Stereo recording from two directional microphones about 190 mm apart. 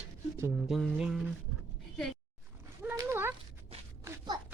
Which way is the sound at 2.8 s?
10° right (ahead or behind).